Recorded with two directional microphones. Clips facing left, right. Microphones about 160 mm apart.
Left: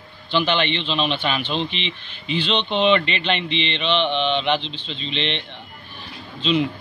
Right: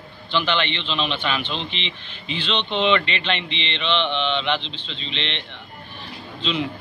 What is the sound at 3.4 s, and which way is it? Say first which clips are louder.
Mantra: left 6 dB; 20° right (ahead or behind).